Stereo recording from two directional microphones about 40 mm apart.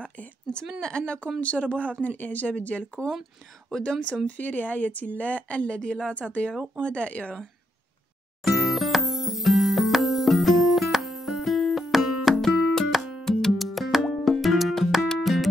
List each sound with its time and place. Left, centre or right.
0.7 s speech: left
4.3 s speech: left
8.5 s music: centre
12.4 s music: centre